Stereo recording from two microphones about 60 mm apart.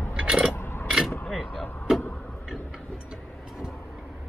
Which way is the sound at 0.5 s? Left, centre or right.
Left.